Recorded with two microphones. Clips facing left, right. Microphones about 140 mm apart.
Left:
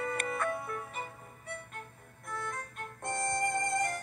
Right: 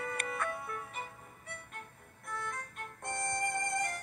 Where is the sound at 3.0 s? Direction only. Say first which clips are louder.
Left 4 dB; 45° left (ahead or behind).